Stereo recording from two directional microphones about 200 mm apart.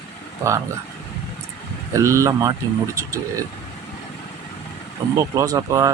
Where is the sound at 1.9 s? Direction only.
15° right (ahead or behind).